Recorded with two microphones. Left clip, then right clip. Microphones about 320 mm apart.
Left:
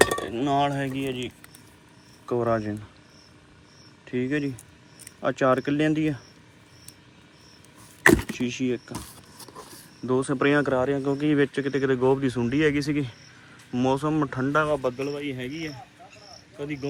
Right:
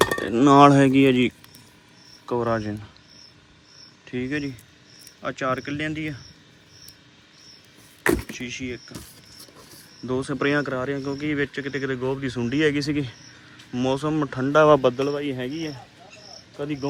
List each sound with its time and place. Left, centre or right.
0.3 s speech: centre
2.2 s speech: centre
4.0 s speech: centre
8.3 s speech: centre